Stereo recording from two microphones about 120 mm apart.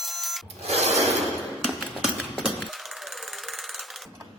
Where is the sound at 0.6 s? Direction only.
65° right (ahead or behind).